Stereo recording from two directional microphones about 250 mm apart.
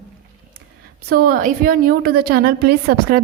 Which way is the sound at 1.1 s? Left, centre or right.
Right.